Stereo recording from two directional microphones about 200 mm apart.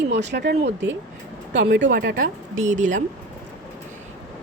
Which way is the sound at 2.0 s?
45° right (ahead or behind).